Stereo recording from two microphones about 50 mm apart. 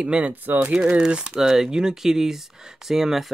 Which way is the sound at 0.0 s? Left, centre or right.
Right.